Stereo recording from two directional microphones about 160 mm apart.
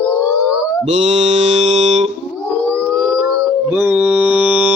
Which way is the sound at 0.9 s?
45° right (ahead or behind).